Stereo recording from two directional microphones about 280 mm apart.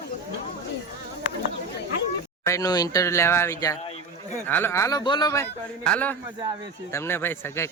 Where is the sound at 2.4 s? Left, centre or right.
Centre.